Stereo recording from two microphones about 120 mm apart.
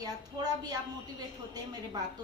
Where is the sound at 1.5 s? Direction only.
35° right (ahead or behind).